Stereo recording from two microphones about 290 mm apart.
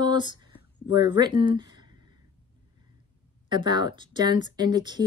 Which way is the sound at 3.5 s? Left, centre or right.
Centre.